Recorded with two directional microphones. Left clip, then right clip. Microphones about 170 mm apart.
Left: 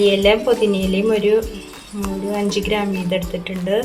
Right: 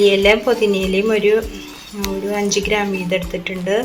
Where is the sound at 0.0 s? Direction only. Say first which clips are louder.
Right 2 dB; centre (ahead or behind).